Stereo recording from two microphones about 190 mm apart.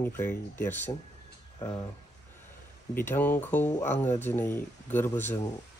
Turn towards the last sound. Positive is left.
turn(degrees=10)  # may be behind; listen again after turning